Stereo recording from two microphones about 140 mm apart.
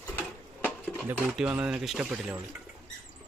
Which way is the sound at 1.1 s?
10° right (ahead or behind).